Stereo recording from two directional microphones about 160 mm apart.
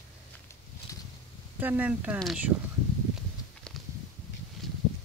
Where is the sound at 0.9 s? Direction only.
20° left (ahead or behind).